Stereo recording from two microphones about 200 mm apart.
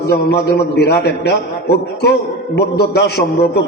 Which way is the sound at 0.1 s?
55° left (ahead or behind).